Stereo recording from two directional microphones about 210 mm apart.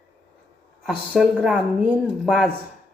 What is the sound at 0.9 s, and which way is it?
A woman's voice, 5° right (ahead or behind).